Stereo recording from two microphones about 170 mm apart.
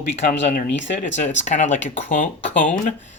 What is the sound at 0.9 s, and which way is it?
Speech, 45° left (ahead or behind).